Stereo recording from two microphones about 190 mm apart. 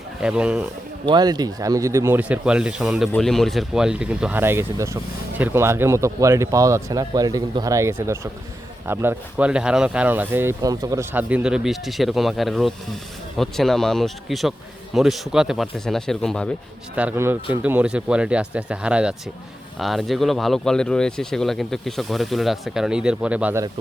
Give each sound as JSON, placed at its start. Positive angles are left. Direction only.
{"t": 0.2, "sound": "speech", "side_deg": -5}
{"t": 1.0, "sound": "speech", "side_deg": -20}
{"t": 16.9, "sound": "speech", "side_deg": -10}